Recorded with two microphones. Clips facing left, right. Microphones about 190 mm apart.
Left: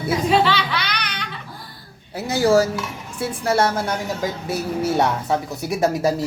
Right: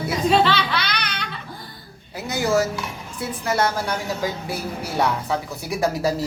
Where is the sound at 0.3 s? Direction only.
15° left (ahead or behind).